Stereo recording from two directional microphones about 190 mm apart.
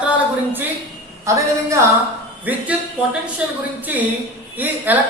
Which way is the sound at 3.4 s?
5° right (ahead or behind).